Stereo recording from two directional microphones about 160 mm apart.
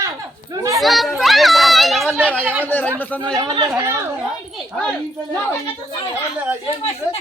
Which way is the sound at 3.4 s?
25° right (ahead or behind).